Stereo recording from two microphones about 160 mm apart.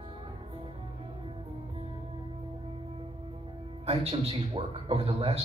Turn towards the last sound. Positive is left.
turn(degrees=-35)  # may be behind; listen again after turning